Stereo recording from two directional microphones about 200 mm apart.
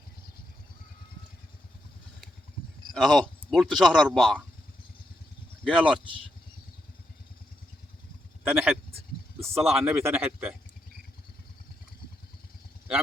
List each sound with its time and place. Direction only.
2.9 s speech: centre (ahead or behind)
5.6 s speech: centre (ahead or behind)
8.4 s speech: 10° right (ahead or behind)